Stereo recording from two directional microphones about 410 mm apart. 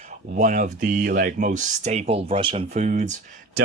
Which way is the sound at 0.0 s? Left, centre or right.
Centre.